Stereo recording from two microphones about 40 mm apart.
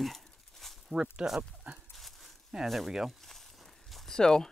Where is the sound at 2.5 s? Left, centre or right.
Centre.